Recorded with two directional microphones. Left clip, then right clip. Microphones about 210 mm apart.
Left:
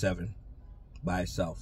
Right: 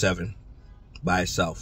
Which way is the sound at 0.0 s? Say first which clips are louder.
Right 7 dB; 5° right (ahead or behind).